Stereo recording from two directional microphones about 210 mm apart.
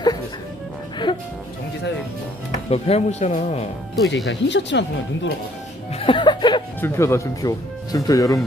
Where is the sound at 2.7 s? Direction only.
30° left (ahead or behind).